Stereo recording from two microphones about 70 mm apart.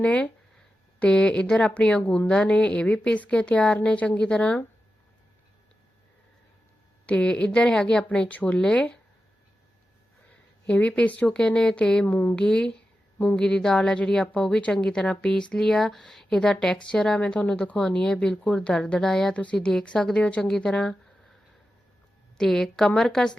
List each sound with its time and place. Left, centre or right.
0.0 s a woman's voice: centre
7.1 s a woman's voice: centre
10.7 s a woman's voice: centre
12.0 s speech: left
12.4 s a woman's voice: centre
22.4 s a woman's voice: centre